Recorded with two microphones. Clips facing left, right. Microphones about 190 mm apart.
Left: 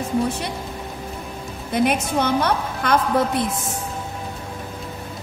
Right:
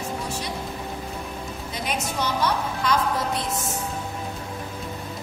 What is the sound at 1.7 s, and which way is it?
A woman's voice, 55° left (ahead or behind).